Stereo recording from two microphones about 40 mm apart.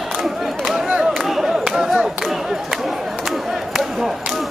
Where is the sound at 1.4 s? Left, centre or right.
Centre.